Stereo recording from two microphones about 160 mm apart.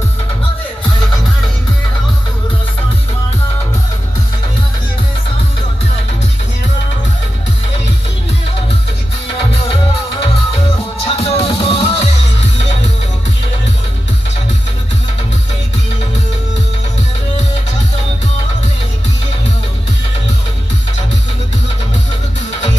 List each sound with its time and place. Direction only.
11.1 s music: 35° left (ahead or behind)